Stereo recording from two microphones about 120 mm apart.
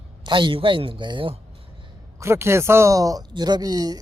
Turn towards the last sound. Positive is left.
turn(degrees=-35)  # may be behind; listen again after turning